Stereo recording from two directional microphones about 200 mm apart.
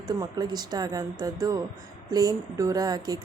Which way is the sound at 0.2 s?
20° right (ahead or behind).